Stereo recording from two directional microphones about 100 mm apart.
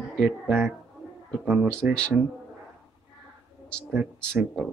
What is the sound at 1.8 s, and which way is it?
Speech, 10° right (ahead or behind).